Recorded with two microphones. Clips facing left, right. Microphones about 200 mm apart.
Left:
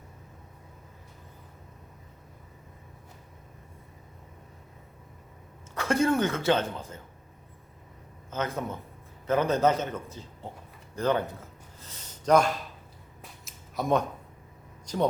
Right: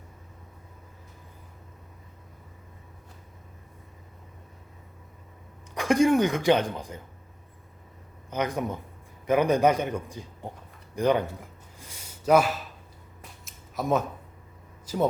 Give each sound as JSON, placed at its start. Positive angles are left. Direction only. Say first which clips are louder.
{"t": 5.7, "sound": "a man's voice", "louder": "right 4 dB", "side_deg": -15}
{"t": 8.3, "sound": "a man's voice", "louder": "right 3 dB", "side_deg": -15}
{"t": 10.9, "sound": "a sound", "louder": "right 3 dB", "side_deg": -15}
{"t": 14.8, "sound": "speech", "louder": "right 1 dB", "side_deg": -5}